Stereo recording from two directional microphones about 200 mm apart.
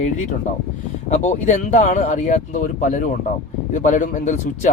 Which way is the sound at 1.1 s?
35° left (ahead or behind).